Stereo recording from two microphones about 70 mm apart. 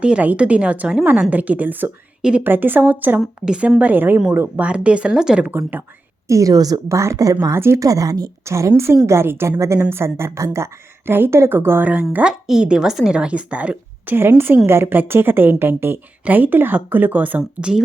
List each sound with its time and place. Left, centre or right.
0.0 s a woman's voice: centre
3.2 s a woman's voice: centre
3.8 s speech: right
4.6 s a woman's voice: centre
5.5 s speech: right
6.2 s a woman's voice: right
7.5 s a woman's voice: right
7.8 s speech: right
8.4 s a woman's voice: right
12.2 s a woman's voice: centre